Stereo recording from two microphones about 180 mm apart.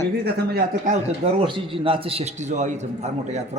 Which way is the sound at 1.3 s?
30° right (ahead or behind).